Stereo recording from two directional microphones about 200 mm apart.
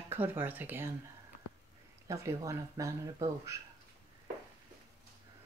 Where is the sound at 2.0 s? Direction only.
15° right (ahead or behind).